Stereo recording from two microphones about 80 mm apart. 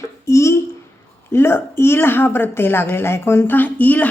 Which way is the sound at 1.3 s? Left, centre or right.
Left.